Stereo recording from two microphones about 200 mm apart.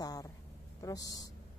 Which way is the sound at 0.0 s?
20° left (ahead or behind).